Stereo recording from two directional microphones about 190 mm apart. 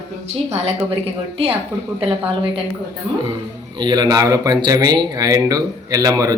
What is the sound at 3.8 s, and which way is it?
Speech, 20° right (ahead or behind).